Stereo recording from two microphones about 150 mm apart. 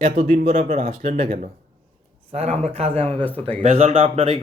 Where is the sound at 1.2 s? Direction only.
55° right (ahead or behind).